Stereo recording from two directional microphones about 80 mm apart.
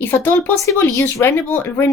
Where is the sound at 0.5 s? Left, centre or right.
Left.